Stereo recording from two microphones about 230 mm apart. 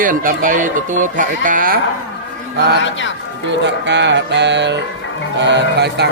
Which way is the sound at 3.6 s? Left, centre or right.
Right.